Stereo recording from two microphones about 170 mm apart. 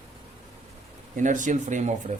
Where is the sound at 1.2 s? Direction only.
50° right (ahead or behind).